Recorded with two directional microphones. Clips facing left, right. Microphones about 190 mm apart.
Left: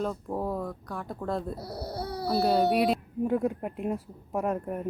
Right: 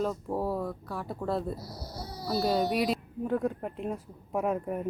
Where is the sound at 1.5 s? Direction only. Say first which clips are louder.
Left 6 dB; 60° left (ahead or behind).